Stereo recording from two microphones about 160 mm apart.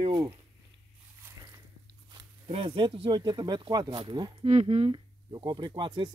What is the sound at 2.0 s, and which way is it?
Speech, 30° right (ahead or behind).